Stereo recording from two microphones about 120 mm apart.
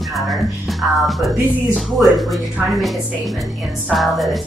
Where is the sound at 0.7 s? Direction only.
Centre (ahead or behind).